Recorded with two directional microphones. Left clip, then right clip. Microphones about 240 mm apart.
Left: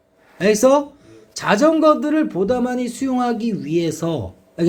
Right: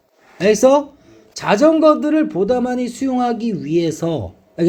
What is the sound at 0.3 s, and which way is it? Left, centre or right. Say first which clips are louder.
Speech: right 2 dB; centre.